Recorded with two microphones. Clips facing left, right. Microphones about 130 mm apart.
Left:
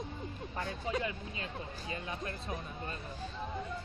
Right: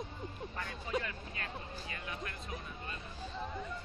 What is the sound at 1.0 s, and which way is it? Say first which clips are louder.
Speech: left 3 dB; 20° left (ahead or behind).